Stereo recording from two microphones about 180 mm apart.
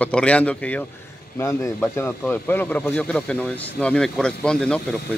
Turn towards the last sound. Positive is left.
turn(degrees=5)  # may be behind; listen again after turning